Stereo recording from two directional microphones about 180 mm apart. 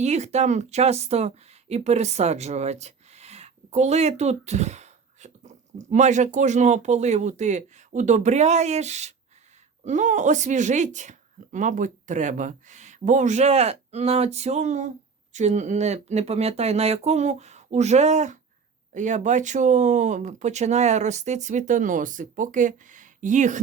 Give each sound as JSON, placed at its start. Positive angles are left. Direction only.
{"t": 0.0, "sound": "speech", "side_deg": -40}